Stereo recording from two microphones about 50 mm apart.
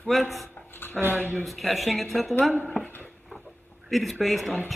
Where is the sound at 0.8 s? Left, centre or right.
Left.